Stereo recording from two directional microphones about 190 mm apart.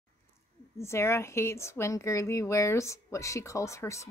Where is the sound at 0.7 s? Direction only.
15° left (ahead or behind).